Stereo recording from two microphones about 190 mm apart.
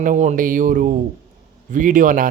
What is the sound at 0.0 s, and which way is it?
Speech, 40° right (ahead or behind).